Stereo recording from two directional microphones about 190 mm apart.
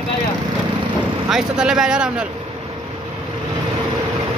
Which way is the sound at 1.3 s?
5° right (ahead or behind).